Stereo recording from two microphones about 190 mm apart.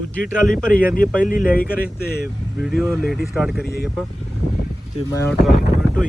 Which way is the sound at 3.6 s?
55° left (ahead or behind).